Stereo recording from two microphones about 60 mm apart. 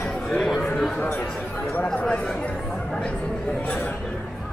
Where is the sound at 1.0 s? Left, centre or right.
Left.